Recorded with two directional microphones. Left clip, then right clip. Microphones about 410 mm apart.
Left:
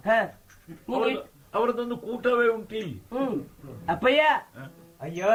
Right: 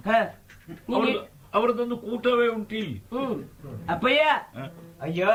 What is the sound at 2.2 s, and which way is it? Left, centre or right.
Speech, centre.